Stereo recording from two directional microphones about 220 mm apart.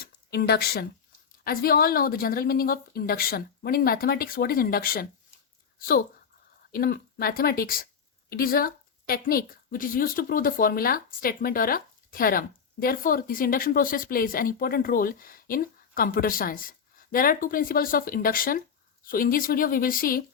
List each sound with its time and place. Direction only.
0.0 s a woman's voice: 45° left (ahead or behind)
6.7 s a woman's voice: 40° left (ahead or behind)